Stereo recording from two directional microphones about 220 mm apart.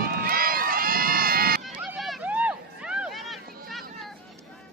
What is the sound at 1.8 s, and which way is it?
Vehicle, centre (ahead or behind).